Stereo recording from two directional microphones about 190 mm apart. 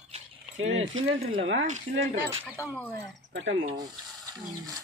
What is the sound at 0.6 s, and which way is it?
Speech, 90° right.